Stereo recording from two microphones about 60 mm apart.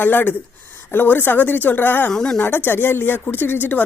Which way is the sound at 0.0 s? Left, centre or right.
Left.